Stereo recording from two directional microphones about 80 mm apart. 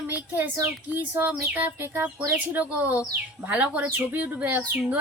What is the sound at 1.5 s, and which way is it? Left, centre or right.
Speech, right.